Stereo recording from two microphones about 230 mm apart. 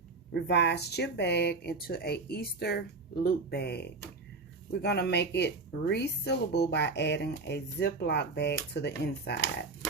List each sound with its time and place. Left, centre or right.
0.4 s speech: left